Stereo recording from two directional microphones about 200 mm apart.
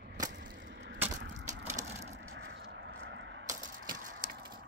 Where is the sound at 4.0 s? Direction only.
40° right (ahead or behind).